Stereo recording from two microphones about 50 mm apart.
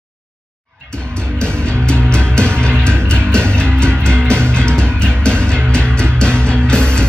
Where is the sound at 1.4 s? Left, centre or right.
Centre.